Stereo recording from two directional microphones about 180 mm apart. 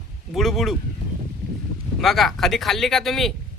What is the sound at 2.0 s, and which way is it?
A man's voice, centre (ahead or behind).